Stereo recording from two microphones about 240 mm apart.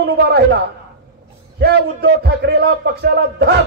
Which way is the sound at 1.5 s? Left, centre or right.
Right.